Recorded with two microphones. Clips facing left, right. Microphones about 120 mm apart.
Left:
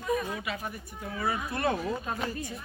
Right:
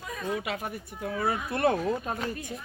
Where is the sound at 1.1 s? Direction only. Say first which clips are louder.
Right 2 dB; 55° right (ahead or behind).